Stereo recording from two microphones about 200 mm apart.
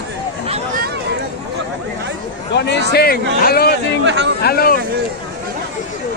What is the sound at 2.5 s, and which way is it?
A man's voice, 60° left (ahead or behind).